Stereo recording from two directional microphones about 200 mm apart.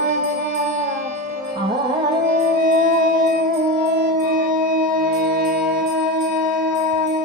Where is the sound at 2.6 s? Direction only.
45° right (ahead or behind).